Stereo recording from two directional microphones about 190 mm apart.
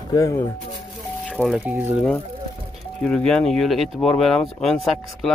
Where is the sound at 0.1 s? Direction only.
15° left (ahead or behind).